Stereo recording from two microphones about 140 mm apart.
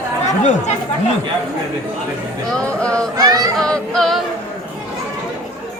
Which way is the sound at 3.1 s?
25° right (ahead or behind).